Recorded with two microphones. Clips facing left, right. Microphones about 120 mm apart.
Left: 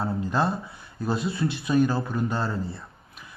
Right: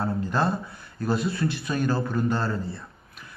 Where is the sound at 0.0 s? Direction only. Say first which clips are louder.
Even; 5° left (ahead or behind).